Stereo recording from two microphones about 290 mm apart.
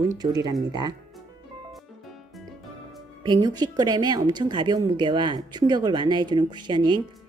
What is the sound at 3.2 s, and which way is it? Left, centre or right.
Speech, centre.